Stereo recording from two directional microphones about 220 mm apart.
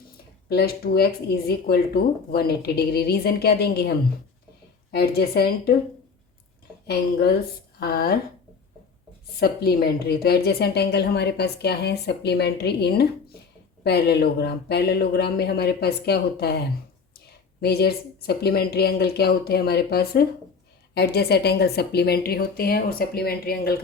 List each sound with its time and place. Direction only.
0.4 s a woman's voice: 45° left (ahead or behind)
6.8 s a woman's voice: 45° left (ahead or behind)
9.3 s a woman's voice: 45° left (ahead or behind)